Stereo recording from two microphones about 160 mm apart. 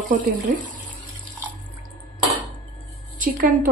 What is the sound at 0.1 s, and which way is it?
Speech, 55° right (ahead or behind).